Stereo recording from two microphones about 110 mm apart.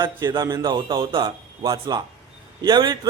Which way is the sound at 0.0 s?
40° right (ahead or behind).